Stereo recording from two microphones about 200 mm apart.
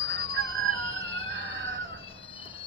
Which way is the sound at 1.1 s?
30° left (ahead or behind).